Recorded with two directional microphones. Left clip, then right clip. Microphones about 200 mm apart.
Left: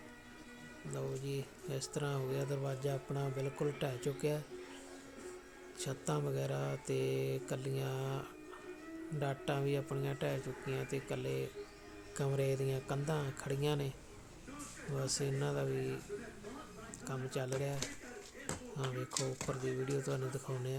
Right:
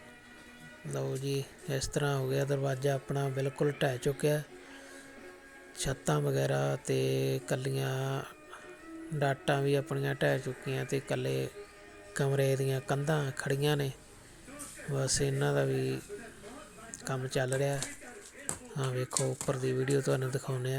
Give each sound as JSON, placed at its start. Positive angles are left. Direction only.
{"t": 0.9, "sound": "speech", "side_deg": -20}
{"t": 5.7, "sound": "speech", "side_deg": -20}
{"t": 14.9, "sound": "speech", "side_deg": -20}
{"t": 17.0, "sound": "speech", "side_deg": -20}
{"t": 18.8, "sound": "speech", "side_deg": -20}